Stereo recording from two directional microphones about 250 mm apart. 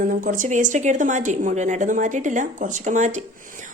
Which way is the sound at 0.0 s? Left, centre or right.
Right.